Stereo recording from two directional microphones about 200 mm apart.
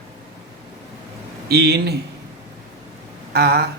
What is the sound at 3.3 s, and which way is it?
Speech, 55° right (ahead or behind).